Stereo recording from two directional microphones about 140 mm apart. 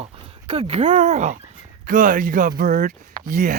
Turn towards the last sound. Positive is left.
turn(degrees=-80)